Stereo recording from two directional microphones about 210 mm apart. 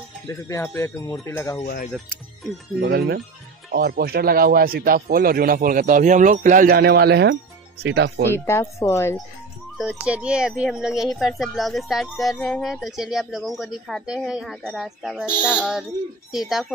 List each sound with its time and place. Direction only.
0.3 s a woman's voice: 15° left (ahead or behind)
2.8 s speech: 55° right (ahead or behind)
8.3 s a woman's voice: 10° left (ahead or behind)
9.8 s speech: 5° right (ahead or behind)